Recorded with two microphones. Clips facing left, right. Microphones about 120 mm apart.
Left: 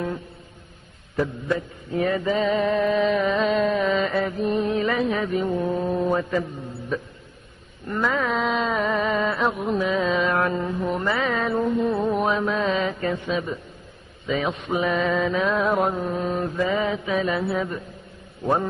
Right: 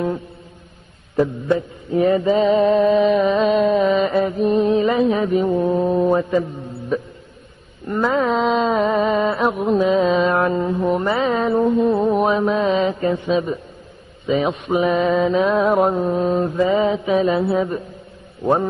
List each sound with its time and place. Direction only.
1.1 s mantra: 20° right (ahead or behind)
7.9 s a sound: 20° right (ahead or behind)
11.6 s mantra: 25° right (ahead or behind)
14.2 s a man's voice: 20° right (ahead or behind)
14.7 s mantra: 25° right (ahead or behind)